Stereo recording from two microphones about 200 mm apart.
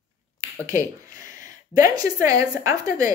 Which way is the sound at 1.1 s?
40° left (ahead or behind).